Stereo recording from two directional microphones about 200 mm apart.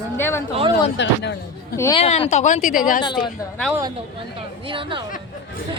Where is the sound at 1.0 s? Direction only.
60° left (ahead or behind).